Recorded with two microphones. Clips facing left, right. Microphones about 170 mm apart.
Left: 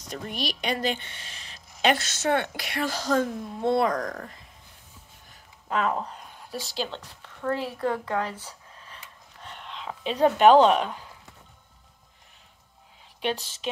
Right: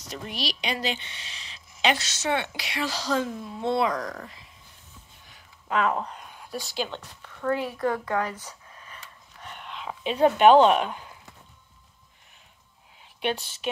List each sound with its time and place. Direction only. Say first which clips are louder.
0.1 s a woman's voice: left 1 dB; 50° left (ahead or behind)
5.3 s a sound: right 1 dB; 35° left (ahead or behind)
6.6 s speech: even; 35° left (ahead or behind)
10.0 s speech: even; 35° left (ahead or behind)
13.2 s speech: even; 35° left (ahead or behind)